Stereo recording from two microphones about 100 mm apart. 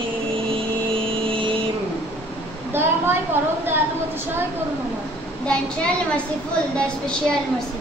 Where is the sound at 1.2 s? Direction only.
60° right (ahead or behind).